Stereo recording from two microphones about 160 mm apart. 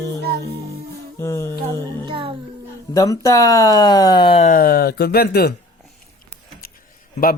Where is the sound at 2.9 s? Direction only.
20° left (ahead or behind); by 4.5 s 35° left (ahead or behind).